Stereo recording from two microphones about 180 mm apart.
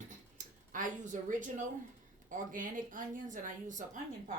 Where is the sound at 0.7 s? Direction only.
45° right (ahead or behind).